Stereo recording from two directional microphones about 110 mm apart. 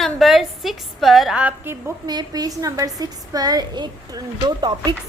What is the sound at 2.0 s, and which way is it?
A woman's voice, 35° right (ahead or behind).